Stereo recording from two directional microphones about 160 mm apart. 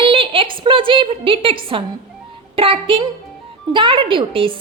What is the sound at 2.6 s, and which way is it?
A woman's voice, 35° right (ahead or behind).